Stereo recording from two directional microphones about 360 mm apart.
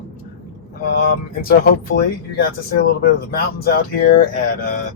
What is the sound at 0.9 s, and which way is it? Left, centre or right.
Speech, left.